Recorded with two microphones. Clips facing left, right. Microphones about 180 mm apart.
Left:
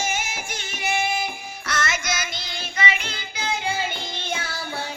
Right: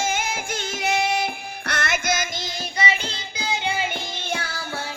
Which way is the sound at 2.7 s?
35° right (ahead or behind).